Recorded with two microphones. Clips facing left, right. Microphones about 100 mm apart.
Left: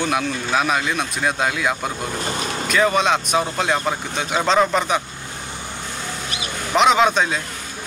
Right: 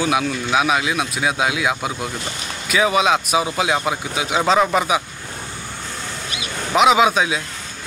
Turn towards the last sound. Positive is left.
turn(degrees=-5)  # may be behind; listen again after turning